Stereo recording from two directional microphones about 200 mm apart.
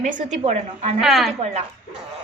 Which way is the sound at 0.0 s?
40° right (ahead or behind).